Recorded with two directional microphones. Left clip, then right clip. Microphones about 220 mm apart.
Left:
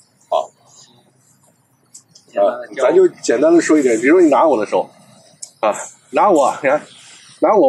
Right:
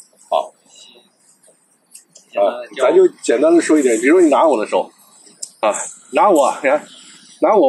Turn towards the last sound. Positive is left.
turn(degrees=-5)  # may be behind; listen again after turning